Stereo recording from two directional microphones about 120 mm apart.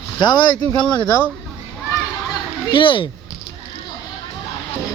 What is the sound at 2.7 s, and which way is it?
Speech, 45° left (ahead or behind).